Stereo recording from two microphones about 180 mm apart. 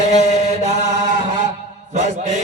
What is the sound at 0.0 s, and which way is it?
Chant, 40° right (ahead or behind).